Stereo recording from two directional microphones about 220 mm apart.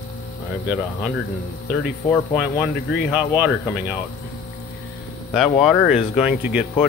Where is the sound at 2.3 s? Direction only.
5° right (ahead or behind).